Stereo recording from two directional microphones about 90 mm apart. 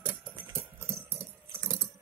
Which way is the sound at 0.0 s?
25° right (ahead or behind).